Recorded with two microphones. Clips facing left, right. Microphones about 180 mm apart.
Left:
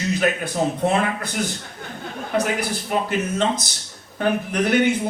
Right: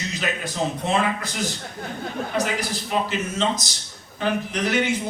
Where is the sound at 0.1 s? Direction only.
55° left (ahead or behind).